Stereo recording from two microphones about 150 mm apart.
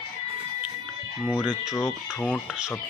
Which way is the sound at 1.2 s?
5° right (ahead or behind).